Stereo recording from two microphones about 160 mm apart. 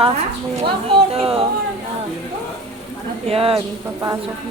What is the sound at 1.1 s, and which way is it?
Speech, 35° right (ahead or behind).